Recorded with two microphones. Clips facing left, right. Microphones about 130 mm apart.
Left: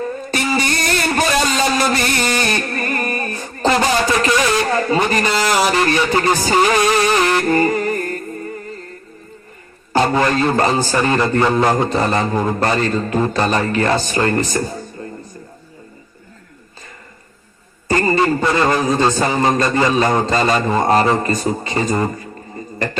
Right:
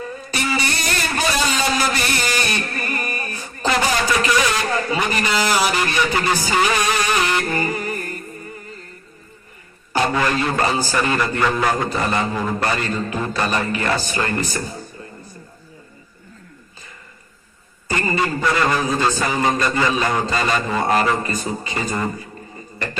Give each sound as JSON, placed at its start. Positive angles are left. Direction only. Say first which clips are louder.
{"t": 0.0, "sound": "music", "louder": "left 5 dB", "side_deg": 35}
{"t": 9.9, "sound": "a man's voice", "louder": "left 4 dB", "side_deg": 35}
{"t": 17.8, "sound": "a sound", "louder": "left 6 dB", "side_deg": 30}
{"t": 18.4, "sound": "a man's voice", "louder": "left 3 dB", "side_deg": 25}